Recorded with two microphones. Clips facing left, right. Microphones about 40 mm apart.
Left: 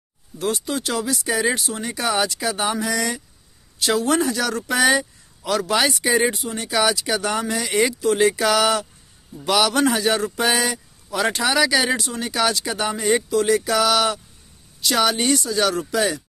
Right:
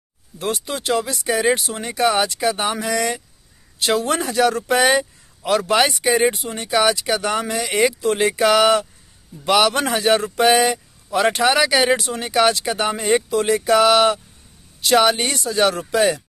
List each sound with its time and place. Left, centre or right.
0.4 s speech: right